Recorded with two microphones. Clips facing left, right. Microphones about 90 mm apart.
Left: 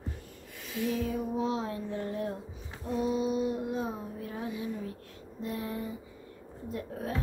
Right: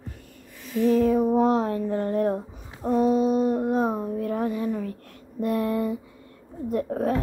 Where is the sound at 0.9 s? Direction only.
45° right (ahead or behind).